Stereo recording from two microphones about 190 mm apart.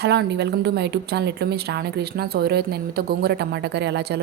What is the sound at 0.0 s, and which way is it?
A woman's voice, 60° right (ahead or behind).